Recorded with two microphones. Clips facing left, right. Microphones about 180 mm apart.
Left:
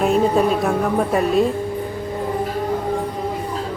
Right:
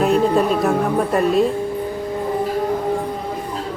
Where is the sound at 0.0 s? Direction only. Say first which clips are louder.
Even; centre (ahead or behind).